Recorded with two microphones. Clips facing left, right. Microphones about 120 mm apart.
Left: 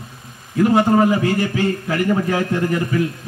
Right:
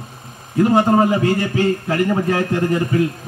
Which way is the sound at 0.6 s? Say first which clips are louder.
Even; 25° right (ahead or behind).